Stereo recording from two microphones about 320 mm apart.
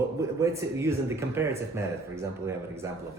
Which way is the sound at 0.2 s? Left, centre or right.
Centre.